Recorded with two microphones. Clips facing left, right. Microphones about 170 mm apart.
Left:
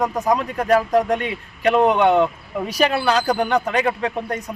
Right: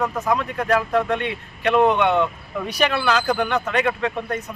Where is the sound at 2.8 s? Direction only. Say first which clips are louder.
Left 2 dB; 35° left (ahead or behind).